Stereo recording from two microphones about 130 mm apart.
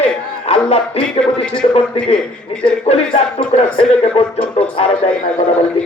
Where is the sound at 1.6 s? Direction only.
55° left (ahead or behind).